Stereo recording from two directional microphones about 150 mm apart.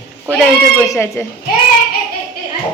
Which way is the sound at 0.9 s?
20° left (ahead or behind).